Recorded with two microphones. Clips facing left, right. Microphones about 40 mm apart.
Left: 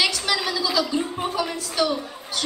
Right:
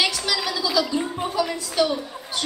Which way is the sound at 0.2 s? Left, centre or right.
Centre.